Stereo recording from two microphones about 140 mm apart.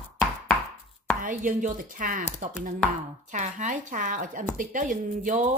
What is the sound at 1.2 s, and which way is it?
Speech, 75° right (ahead or behind).